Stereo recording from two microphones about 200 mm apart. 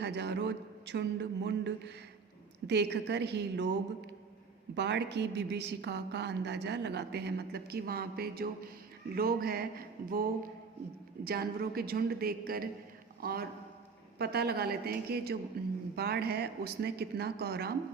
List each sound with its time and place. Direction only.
0.0 s a woman's voice: 60° right (ahead or behind)
11.2 s speech: 50° right (ahead or behind)